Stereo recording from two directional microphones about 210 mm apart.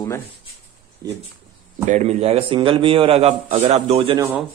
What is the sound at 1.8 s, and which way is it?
A man's voice, 30° right (ahead or behind).